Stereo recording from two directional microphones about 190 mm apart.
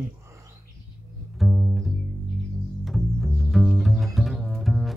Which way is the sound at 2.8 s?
Centre (ahead or behind).